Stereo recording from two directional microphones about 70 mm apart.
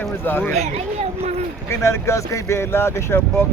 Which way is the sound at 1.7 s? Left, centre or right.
Left.